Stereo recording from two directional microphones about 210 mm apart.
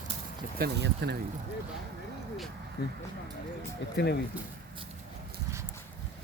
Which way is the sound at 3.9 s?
50° left (ahead or behind).